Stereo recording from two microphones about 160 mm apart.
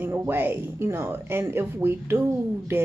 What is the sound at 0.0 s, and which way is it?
Speech, 15° right (ahead or behind).